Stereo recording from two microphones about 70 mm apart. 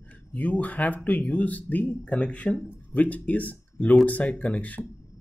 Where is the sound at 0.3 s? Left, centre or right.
Left.